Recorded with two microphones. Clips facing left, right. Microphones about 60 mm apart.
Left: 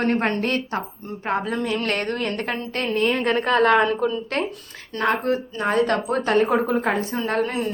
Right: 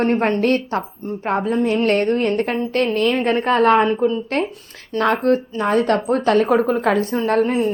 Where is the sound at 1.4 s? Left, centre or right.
Left.